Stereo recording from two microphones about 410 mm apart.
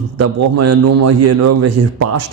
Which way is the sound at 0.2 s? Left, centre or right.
Right.